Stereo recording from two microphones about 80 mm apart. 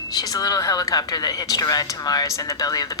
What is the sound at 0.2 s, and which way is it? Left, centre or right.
A woman's voice, left.